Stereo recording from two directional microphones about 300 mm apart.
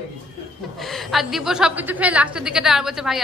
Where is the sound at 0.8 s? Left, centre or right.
Centre.